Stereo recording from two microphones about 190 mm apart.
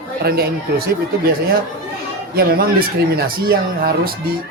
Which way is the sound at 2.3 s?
50° right (ahead or behind).